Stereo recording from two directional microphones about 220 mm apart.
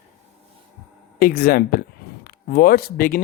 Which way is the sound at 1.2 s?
40° left (ahead or behind).